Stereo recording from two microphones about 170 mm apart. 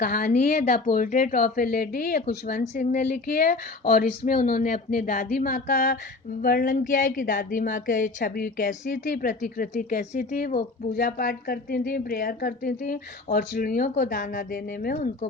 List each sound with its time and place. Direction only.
0.0 s speech: 55° left (ahead or behind)